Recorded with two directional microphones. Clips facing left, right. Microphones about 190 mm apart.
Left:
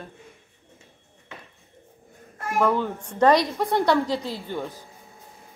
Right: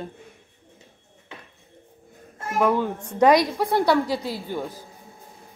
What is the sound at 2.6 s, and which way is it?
A woman's voice, 10° right (ahead or behind).